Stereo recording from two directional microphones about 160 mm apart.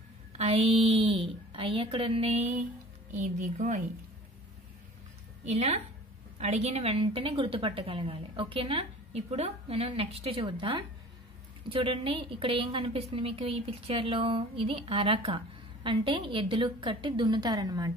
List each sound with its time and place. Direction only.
0.4 s a woman's voice: 40° right (ahead or behind)
3.1 s speech: 50° right (ahead or behind)
5.4 s a woman's voice: 45° right (ahead or behind); by 17.9 s 25° right (ahead or behind)